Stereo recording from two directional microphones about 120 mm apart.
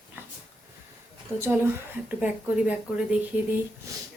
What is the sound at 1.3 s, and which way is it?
Speech, 20° right (ahead or behind).